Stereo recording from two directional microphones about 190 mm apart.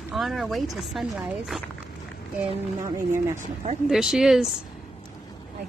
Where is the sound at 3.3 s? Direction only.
35° right (ahead or behind).